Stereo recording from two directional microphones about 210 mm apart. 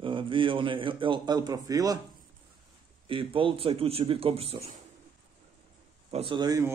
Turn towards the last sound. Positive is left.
turn(degrees=-20)  # may be behind; listen again after turning